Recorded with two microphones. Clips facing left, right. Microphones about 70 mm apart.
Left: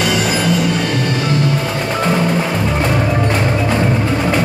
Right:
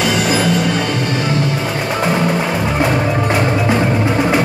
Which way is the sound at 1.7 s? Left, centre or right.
Centre.